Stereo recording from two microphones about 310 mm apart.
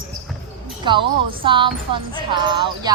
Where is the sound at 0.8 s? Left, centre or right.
Centre.